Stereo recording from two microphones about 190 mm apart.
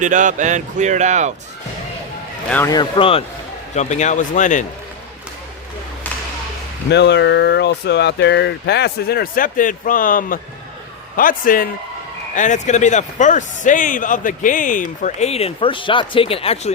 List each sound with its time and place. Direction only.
0.0 s speech: 40° right (ahead or behind)
2.6 s a man's voice: 25° left (ahead or behind); by 4.6 s 40° left (ahead or behind)
6.9 s a man's voice: 65° left (ahead or behind); by 16.7 s 30° left (ahead or behind)